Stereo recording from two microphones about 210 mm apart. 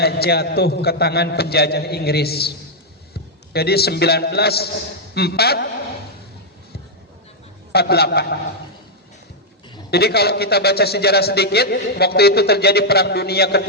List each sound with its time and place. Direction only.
0.0 s a man's voice: 50° left (ahead or behind)
7.7 s a man's voice: 50° left (ahead or behind)
9.9 s a man's voice: 50° left (ahead or behind)